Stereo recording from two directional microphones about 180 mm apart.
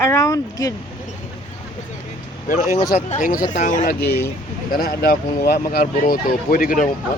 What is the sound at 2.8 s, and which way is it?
Speech, 35° left (ahead or behind).